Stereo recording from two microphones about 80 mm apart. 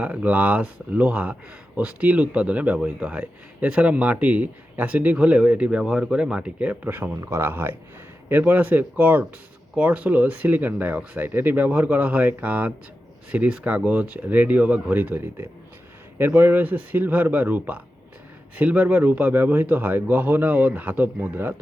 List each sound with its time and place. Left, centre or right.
0.0 s speech: centre